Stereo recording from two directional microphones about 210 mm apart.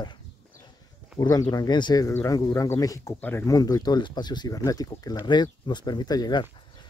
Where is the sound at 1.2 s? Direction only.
20° left (ahead or behind).